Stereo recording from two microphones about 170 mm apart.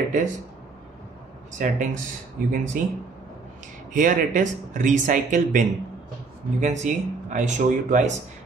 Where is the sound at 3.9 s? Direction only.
50° right (ahead or behind).